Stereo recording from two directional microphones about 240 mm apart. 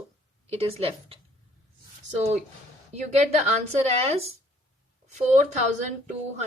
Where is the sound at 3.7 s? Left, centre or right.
Right.